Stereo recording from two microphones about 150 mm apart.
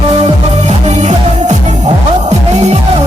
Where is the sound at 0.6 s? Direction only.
50° right (ahead or behind).